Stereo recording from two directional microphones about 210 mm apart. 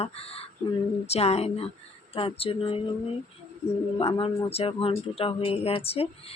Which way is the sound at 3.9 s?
25° left (ahead or behind).